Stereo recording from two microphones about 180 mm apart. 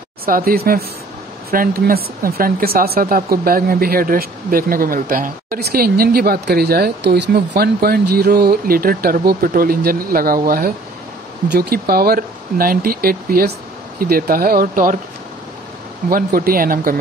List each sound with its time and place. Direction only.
0.2 s speech: 55° right (ahead or behind)
16.1 s speech: 55° right (ahead or behind)